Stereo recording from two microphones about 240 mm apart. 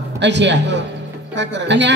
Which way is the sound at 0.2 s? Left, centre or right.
Right.